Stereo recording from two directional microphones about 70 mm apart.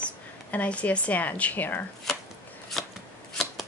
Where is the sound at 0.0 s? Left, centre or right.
Centre.